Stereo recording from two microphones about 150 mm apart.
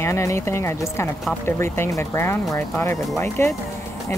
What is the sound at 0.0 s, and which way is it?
Speech, 20° left (ahead or behind).